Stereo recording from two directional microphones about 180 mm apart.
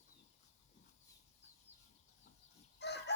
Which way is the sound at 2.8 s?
70° left (ahead or behind).